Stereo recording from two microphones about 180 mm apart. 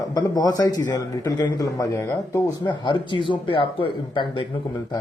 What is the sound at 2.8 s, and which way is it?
A man's voice, 25° left (ahead or behind).